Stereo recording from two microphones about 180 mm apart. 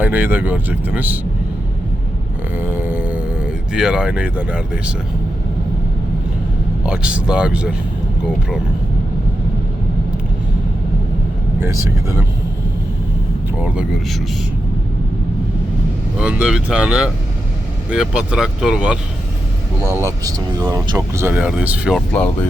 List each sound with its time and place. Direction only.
0.0 s speech: 10° right (ahead or behind)
2.6 s speech: 10° right (ahead or behind)
6.8 s speech: 5° right (ahead or behind)
11.6 s speech: 15° right (ahead or behind)
13.6 s speech: 5° right (ahead or behind)
16.1 s speech: 5° right (ahead or behind)
19.8 s speech: 15° right (ahead or behind)
21.9 s speech: 5° left (ahead or behind)